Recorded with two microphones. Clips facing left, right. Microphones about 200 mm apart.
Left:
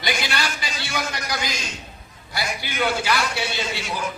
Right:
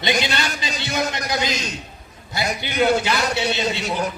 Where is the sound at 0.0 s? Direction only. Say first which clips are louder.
Right 4 dB; 20° right (ahead or behind).